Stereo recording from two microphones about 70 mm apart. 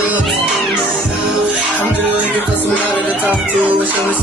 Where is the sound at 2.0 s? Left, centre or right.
Right.